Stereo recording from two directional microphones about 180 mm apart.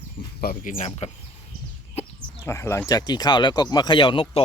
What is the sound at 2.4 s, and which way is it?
Speech, 15° left (ahead or behind).